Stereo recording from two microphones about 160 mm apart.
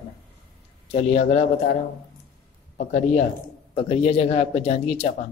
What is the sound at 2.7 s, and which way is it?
Speech, 55° left (ahead or behind).